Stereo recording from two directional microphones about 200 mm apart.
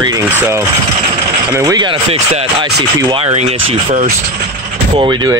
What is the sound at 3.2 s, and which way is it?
Speech, 30° right (ahead or behind).